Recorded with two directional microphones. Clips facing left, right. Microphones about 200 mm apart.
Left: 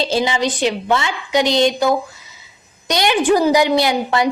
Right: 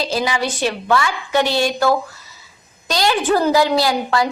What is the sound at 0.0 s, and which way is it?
A woman's voice, 25° left (ahead or behind).